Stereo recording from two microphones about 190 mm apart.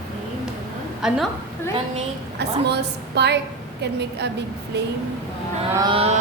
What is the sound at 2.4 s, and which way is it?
A woman's voice, 60° right (ahead or behind).